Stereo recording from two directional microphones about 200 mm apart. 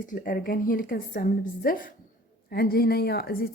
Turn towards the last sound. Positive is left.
turn(degrees=50)  # may be behind; listen again after turning